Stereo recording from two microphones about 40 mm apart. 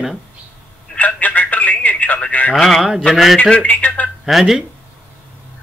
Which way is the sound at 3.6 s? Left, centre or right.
Left.